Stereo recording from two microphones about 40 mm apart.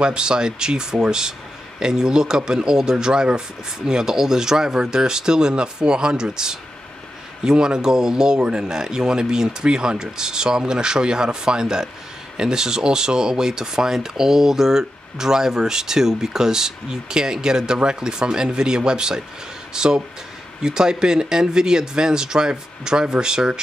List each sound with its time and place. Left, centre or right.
0.0 s speech: right